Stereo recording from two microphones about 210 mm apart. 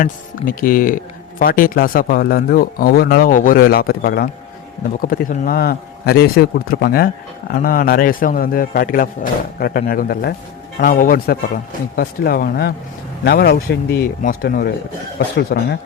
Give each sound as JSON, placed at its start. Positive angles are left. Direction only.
{"t": 0.0, "sound": "speech", "side_deg": 40}